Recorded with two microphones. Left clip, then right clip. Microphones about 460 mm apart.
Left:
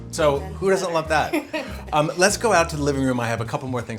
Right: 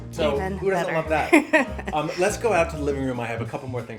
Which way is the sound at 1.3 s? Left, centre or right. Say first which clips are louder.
Right 8 dB; right.